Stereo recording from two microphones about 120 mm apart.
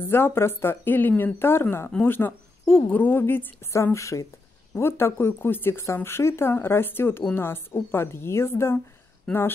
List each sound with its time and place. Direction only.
0.1 s speech: 20° left (ahead or behind)